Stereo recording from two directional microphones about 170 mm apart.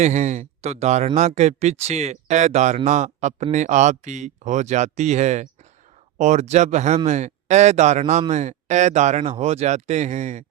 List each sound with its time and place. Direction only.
0.0 s speech: 45° right (ahead or behind)